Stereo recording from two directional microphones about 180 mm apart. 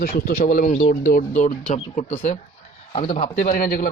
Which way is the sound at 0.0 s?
55° left (ahead or behind).